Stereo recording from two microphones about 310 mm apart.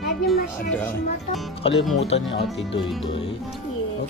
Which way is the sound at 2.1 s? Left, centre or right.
Left.